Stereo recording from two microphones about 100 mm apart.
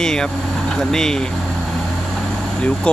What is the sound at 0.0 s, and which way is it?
Speech, 5° left (ahead or behind).